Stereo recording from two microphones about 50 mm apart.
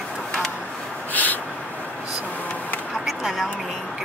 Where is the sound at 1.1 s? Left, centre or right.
Left.